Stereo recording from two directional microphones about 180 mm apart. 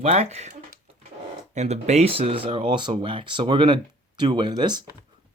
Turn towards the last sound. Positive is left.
turn(degrees=-25)  # may be behind; listen again after turning